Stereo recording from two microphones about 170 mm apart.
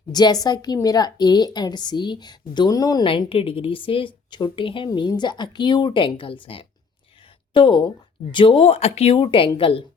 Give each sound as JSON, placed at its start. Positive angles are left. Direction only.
{"t": 0.1, "sound": "a woman's voice", "side_deg": 25}